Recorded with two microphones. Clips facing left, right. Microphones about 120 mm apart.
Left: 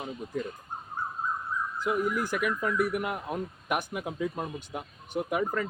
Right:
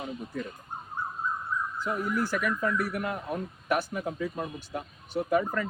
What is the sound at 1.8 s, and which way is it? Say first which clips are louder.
A man's voice: left 2 dB; 15° left (ahead or behind).